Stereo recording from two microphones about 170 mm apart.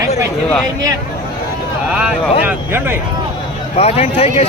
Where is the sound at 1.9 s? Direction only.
5° right (ahead or behind).